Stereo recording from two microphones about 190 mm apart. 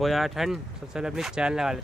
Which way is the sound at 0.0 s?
Centre (ahead or behind).